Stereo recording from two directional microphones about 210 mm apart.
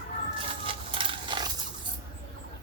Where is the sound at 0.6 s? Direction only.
25° right (ahead or behind).